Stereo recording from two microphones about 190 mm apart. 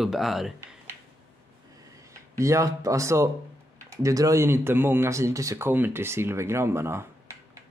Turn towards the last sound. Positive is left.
turn(degrees=-15)  # may be behind; listen again after turning